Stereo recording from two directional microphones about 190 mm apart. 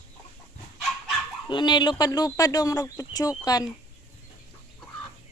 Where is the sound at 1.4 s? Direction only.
25° left (ahead or behind).